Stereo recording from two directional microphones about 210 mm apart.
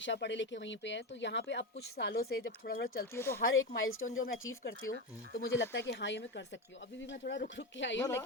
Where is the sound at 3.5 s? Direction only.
70° left (ahead or behind).